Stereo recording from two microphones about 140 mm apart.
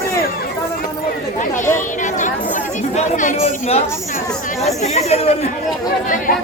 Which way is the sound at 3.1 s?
65° left (ahead or behind).